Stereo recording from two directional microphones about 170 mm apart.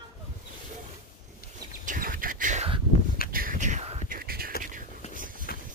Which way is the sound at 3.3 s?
55° right (ahead or behind).